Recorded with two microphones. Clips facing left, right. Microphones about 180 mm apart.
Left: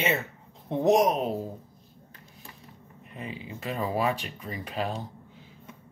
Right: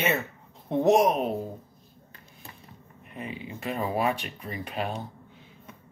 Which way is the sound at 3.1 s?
30° left (ahead or behind).